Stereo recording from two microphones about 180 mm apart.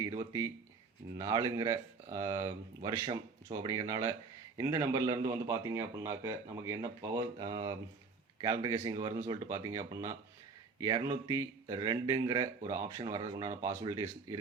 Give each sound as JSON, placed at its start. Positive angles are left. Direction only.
{"t": 0.2, "sound": "a man's voice", "side_deg": -15}